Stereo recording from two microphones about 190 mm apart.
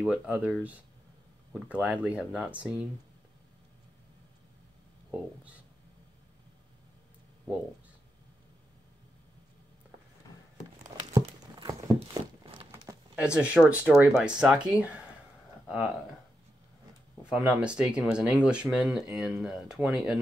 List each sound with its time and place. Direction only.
0.0 s speech: 5° right (ahead or behind)
11.1 s a sound: 20° right (ahead or behind)
13.1 s speech: 5° right (ahead or behind)
17.2 s speech: 5° right (ahead or behind)